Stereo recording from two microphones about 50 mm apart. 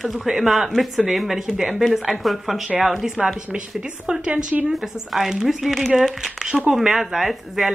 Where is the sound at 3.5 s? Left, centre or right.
Centre.